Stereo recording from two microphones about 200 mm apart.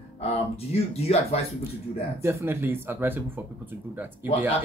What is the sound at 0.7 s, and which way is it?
Chuckle, 30° left (ahead or behind).